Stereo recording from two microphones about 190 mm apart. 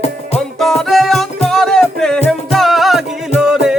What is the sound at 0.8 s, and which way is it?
Music, centre (ahead or behind).